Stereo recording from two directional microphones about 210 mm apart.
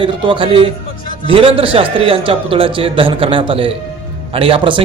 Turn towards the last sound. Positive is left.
turn(degrees=-25)  # may be behind; listen again after turning